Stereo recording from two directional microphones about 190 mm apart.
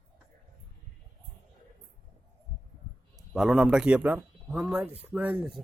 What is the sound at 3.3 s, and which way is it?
Speech, centre (ahead or behind).